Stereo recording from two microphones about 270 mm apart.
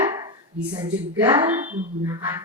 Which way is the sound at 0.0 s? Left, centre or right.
Centre.